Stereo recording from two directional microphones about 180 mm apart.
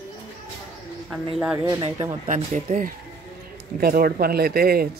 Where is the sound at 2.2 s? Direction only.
45° right (ahead or behind).